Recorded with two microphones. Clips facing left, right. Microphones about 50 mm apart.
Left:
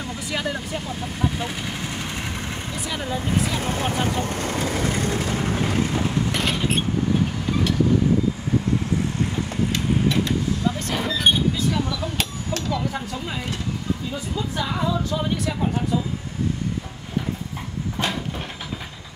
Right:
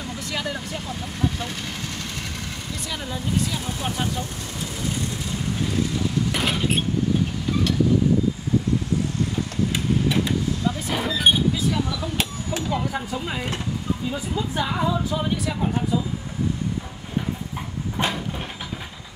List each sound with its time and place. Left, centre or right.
0.2 s speech: centre
3.5 s speech: left
6.3 s vehicle: centre
9.7 s a sound: centre
10.9 s speech: centre
12.2 s speech: centre
17.9 s vehicle: centre